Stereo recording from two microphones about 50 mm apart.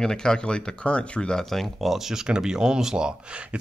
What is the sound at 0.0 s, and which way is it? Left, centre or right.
Speech, centre.